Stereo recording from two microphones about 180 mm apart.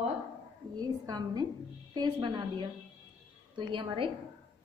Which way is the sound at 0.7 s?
20° right (ahead or behind).